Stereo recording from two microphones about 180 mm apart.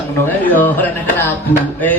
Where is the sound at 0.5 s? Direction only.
10° left (ahead or behind).